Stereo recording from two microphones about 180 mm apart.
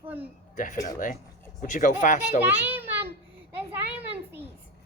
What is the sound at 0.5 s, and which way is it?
Speech, 45° left (ahead or behind).